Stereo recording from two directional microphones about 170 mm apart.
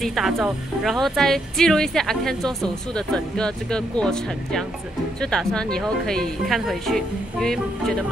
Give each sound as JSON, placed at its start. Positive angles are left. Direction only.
{"t": 0.0, "sound": "speech", "side_deg": 0}